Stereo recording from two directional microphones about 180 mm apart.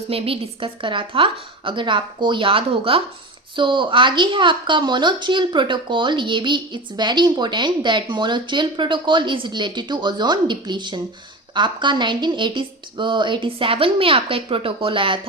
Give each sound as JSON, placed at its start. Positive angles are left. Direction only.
{"t": 0.1, "sound": "a woman's voice", "side_deg": -30}